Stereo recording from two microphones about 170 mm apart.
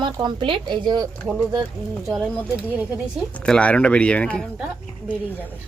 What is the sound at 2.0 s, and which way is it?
A woman's voice, centre (ahead or behind).